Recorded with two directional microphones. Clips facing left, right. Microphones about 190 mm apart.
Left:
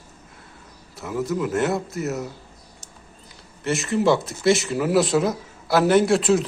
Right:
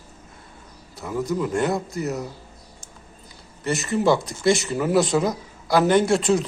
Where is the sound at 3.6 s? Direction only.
Centre (ahead or behind).